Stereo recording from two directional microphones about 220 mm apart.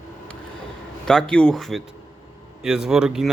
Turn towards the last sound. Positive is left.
turn(degrees=-5)  # may be behind; listen again after turning